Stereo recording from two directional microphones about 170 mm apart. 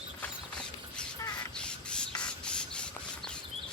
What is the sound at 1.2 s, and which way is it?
Crow, 25° left (ahead or behind).